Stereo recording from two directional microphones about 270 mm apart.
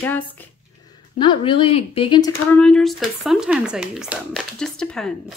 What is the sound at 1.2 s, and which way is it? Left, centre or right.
Speech, centre.